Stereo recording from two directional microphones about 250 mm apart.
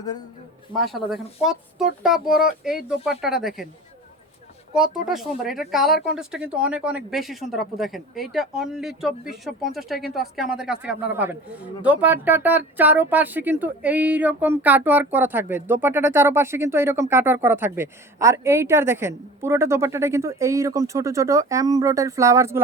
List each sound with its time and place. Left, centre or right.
0.9 s speech: centre
4.7 s speech: centre